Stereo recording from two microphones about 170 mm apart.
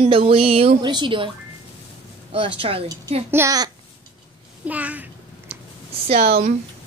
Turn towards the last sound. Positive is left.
turn(degrees=-40)  # may be behind; listen again after turning